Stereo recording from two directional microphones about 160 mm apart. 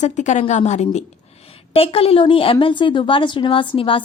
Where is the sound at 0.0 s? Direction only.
50° left (ahead or behind).